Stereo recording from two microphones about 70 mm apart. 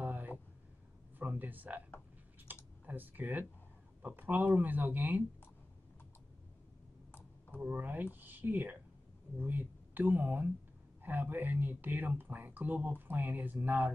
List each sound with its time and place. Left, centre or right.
0.0 s a sound: right
4.0 s speech: right
7.1 s clicking: left
7.6 s speech: right